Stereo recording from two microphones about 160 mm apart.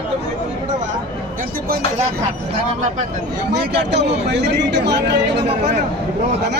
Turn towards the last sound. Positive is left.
turn(degrees=-90)